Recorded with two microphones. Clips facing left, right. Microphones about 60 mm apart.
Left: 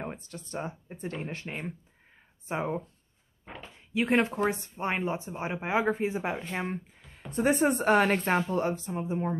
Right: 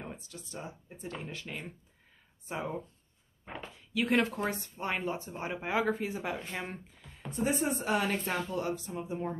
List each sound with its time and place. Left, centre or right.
0.0 s speech: left
3.9 s speech: left
7.2 s speech: left
8.4 s speech: left